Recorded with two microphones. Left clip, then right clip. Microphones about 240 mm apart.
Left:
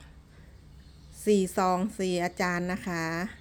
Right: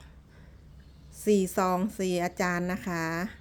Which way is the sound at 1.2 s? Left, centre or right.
Centre.